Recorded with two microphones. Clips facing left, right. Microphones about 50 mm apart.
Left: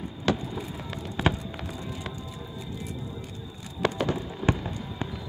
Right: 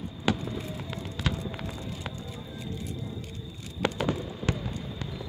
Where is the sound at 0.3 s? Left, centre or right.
Centre.